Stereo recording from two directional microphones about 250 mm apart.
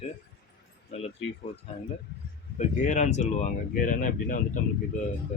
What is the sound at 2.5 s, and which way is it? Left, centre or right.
Speech, left.